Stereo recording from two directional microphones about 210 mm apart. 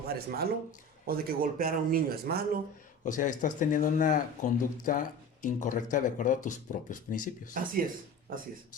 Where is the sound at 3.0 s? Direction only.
35° left (ahead or behind).